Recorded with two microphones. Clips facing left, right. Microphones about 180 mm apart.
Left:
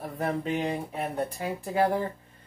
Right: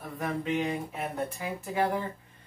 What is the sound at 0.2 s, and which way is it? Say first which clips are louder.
Speech: left 1 dB; 35° left (ahead or behind).